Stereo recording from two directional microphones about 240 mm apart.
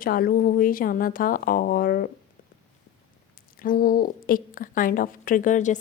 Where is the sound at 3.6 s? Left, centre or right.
Left.